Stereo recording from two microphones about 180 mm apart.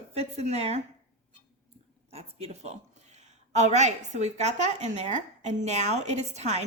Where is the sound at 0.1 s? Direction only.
35° right (ahead or behind).